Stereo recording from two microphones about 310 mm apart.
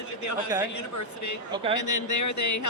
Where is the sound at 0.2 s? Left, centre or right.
Left.